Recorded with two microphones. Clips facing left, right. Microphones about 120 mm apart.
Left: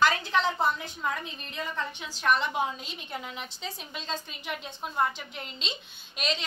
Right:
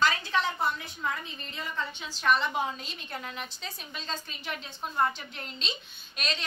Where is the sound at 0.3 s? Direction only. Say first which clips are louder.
Left 2 dB; 25° left (ahead or behind).